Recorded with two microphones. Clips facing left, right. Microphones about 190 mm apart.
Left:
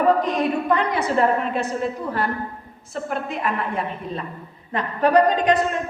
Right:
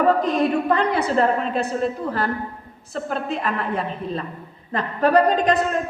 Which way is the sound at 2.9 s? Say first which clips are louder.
Right 1 dB; 30° right (ahead or behind).